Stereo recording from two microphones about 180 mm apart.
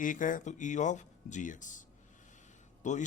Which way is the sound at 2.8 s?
40° left (ahead or behind).